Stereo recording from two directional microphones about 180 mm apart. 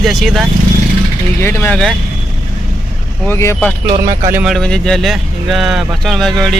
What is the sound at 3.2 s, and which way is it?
Speech, 15° left (ahead or behind).